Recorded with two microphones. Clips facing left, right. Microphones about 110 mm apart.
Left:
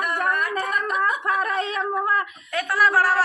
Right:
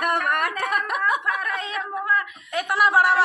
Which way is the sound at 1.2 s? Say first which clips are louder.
Left 3 dB; 35° left (ahead or behind).